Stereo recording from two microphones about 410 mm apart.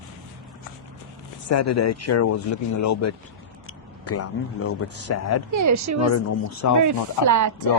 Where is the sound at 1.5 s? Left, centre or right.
Left.